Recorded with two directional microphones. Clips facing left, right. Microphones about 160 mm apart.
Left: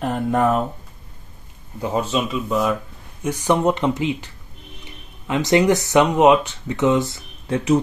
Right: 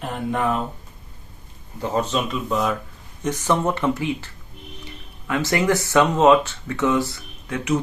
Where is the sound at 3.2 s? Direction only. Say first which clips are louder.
Left 3 dB; 15° left (ahead or behind); by 7.8 s 30° left (ahead or behind).